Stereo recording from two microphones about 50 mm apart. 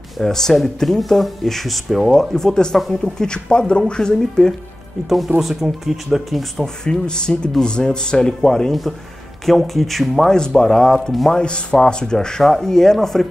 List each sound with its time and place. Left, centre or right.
0.2 s speech: centre
2.3 s speech: centre
5.4 s speech: centre
6.6 s speech: centre
10.3 s speech: centre
11.4 s speech: centre